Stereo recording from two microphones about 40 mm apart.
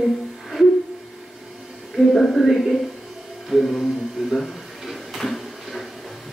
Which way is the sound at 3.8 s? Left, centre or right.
Centre.